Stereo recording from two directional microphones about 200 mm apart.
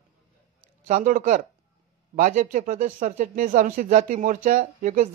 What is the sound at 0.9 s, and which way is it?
Speech, 40° right (ahead or behind).